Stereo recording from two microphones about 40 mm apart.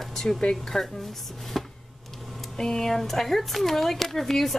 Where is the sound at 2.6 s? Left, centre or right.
Centre.